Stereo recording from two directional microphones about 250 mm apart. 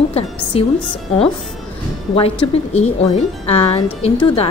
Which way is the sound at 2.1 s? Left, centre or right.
Left.